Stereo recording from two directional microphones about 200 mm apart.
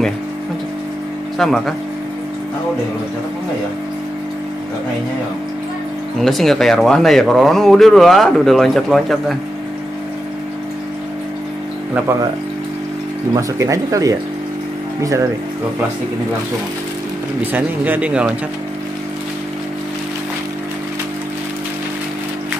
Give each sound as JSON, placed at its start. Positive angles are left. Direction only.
{"t": 1.4, "sound": "speech", "side_deg": 0}
{"t": 6.2, "sound": "speech", "side_deg": 0}
{"t": 13.3, "sound": "speech", "side_deg": -15}
{"t": 17.4, "sound": "speech", "side_deg": -10}